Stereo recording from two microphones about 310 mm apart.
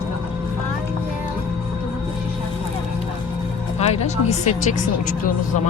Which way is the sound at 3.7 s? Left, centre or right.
Centre.